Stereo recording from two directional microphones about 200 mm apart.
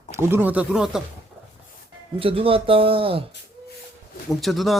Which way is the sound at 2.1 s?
25° right (ahead or behind).